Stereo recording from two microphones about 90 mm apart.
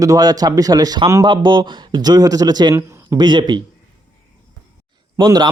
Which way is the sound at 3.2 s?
55° right (ahead or behind).